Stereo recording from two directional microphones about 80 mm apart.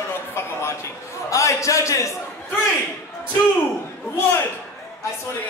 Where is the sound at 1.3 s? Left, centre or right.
Left.